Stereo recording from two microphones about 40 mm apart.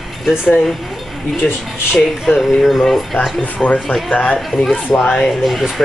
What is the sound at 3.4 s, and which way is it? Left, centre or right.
Speech, left.